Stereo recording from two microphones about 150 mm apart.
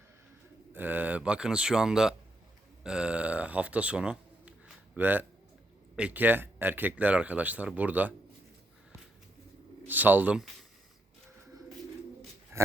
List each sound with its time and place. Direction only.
0.7 s speech: 10° right (ahead or behind)
9.8 s speech: 10° right (ahead or behind)
12.5 s a sound: 20° right (ahead or behind)